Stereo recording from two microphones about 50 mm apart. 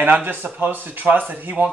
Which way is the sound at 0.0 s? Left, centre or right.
Right.